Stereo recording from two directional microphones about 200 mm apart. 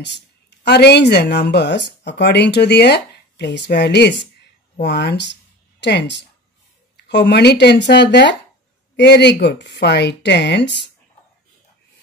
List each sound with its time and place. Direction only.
0.7 s speech: 55° left (ahead or behind)